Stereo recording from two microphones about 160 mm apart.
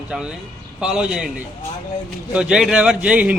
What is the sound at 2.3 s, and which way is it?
Speech, 5° right (ahead or behind).